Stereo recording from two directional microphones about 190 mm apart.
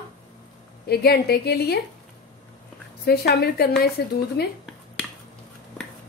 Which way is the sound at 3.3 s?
55° left (ahead or behind).